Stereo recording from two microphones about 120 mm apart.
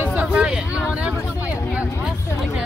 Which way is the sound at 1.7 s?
5° right (ahead or behind).